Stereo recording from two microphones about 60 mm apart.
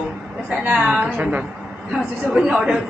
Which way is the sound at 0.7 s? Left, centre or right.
Centre.